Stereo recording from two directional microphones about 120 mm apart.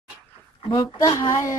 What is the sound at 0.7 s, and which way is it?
Speech, 30° left (ahead or behind).